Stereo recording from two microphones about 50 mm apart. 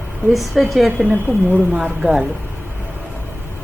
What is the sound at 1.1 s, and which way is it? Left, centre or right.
Speech, right.